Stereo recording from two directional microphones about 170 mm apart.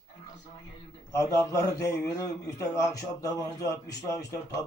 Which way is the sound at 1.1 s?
20° left (ahead or behind).